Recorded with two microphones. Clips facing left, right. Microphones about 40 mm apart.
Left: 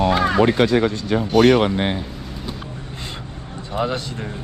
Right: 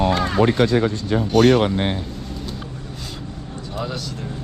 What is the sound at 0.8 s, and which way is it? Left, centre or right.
Speech, left.